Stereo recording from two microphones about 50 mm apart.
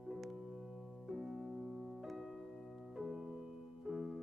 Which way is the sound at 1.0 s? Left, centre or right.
Centre.